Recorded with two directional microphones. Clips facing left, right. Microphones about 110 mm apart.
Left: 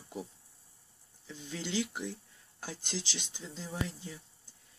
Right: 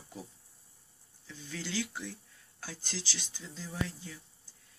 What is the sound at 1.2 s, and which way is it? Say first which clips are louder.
Speech: left 2 dB; 20° left (ahead or behind).